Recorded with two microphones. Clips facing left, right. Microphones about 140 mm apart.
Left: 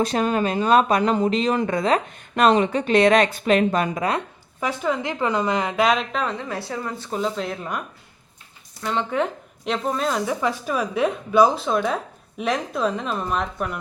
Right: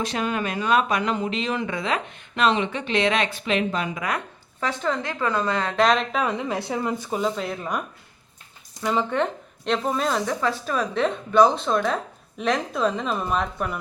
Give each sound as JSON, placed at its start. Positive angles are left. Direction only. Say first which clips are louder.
{"t": 0.0, "sound": "speech", "louder": "left 5 dB", "side_deg": 40}
{"t": 4.6, "sound": "a woman's voice", "louder": "left 2 dB", "side_deg": 10}
{"t": 6.2, "sound": "speech", "louder": "right 2 dB", "side_deg": -20}
{"t": 7.1, "sound": "speech", "louder": "left 4 dB", "side_deg": 0}
{"t": 8.8, "sound": "a woman's voice", "louder": "even", "side_deg": -5}